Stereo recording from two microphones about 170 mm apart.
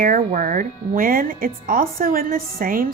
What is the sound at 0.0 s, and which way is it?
A woman's voice, 55° right (ahead or behind).